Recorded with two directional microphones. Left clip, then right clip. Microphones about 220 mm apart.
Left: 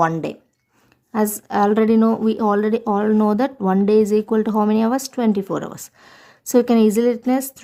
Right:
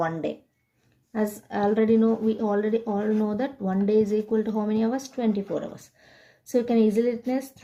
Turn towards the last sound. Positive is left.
turn(degrees=45)  # may be behind; listen again after turning